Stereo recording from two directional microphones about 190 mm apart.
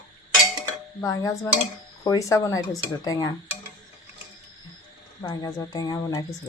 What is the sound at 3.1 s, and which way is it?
Dishes, 20° left (ahead or behind).